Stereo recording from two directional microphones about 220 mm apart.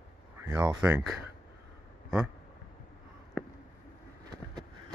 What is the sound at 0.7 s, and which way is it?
Speech, 5° right (ahead or behind).